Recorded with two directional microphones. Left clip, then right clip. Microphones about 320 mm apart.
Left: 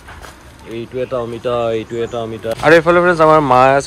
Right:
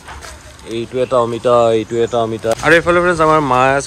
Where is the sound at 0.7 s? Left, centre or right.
Centre.